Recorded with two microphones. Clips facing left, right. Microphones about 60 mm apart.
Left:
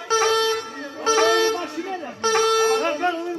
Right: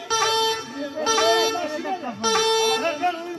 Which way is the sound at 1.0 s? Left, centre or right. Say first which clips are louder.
Left 2 dB; left.